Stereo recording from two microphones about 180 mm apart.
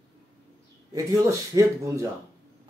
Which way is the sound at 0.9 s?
15° right (ahead or behind).